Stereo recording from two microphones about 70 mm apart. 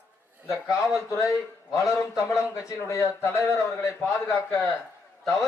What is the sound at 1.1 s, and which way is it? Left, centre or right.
Speech, left.